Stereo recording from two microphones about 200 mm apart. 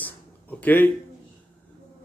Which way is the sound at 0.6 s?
10° left (ahead or behind).